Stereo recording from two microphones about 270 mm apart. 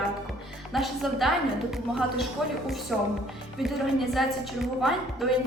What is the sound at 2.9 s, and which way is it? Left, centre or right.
A woman's voice, centre.